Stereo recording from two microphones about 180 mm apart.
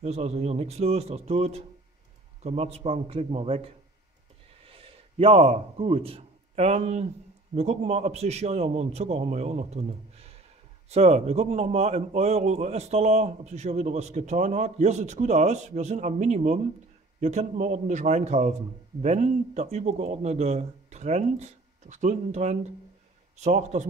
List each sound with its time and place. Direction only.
0.0 s a man's voice: 35° right (ahead or behind)